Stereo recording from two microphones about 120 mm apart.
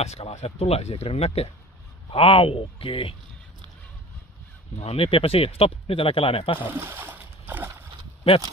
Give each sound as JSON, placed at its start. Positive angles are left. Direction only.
{"t": 0.0, "sound": "speech", "side_deg": 65}
{"t": 2.1, "sound": "speech", "side_deg": 50}
{"t": 4.7, "sound": "speech", "side_deg": 55}
{"t": 6.7, "sound": "splash", "side_deg": -15}